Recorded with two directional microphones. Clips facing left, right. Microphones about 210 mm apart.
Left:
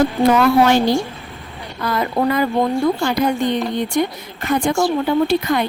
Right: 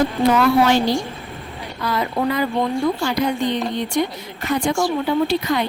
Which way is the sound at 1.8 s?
50° left (ahead or behind).